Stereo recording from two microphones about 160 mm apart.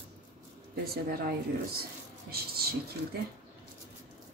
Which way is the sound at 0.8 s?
70° right (ahead or behind).